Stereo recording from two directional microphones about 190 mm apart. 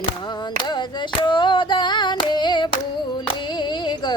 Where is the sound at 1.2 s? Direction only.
25° left (ahead or behind).